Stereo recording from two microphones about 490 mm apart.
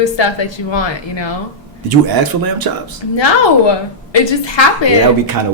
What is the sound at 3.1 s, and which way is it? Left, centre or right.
Speech, left.